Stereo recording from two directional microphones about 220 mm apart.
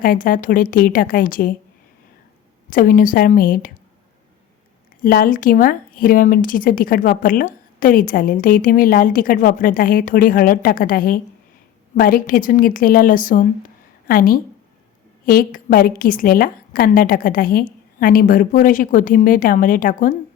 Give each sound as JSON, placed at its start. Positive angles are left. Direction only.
{"t": 0.0, "sound": "a woman's voice", "side_deg": 40}
{"t": 2.6, "sound": "a woman's voice", "side_deg": 40}
{"t": 5.0, "sound": "a woman's voice", "side_deg": 40}